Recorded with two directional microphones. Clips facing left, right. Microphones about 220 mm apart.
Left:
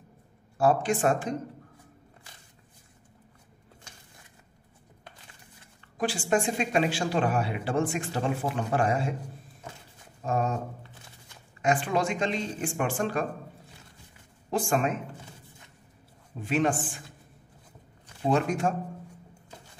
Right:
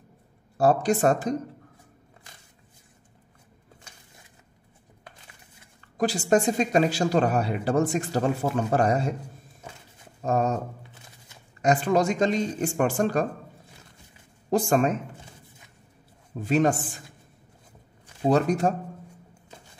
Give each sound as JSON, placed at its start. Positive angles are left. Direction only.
{"t": 0.6, "sound": "speech", "side_deg": -40}
{"t": 5.9, "sound": "speech", "side_deg": -40}
{"t": 10.2, "sound": "speech", "side_deg": -40}
{"t": 11.6, "sound": "speech", "side_deg": -40}
{"t": 14.5, "sound": "speech", "side_deg": -40}
{"t": 16.3, "sound": "speech", "side_deg": -40}
{"t": 18.3, "sound": "speech", "side_deg": -40}